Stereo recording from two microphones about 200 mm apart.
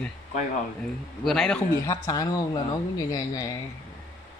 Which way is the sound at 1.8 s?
20° left (ahead or behind).